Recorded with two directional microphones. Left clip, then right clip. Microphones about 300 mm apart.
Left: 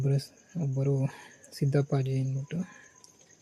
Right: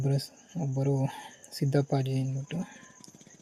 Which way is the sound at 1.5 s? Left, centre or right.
Centre.